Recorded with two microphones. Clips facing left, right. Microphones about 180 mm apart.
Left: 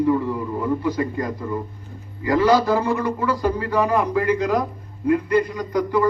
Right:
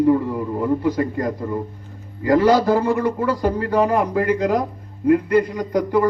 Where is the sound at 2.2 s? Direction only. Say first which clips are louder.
Right 2 dB; 50° right (ahead or behind).